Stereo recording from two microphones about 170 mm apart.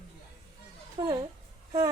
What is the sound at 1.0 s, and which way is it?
Speech, 25° right (ahead or behind).